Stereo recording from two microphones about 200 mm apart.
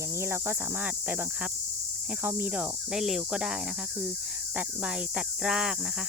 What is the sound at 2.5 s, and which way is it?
Speech, 5° right (ahead or behind).